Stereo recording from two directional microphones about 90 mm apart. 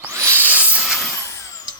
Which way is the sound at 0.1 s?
35° right (ahead or behind).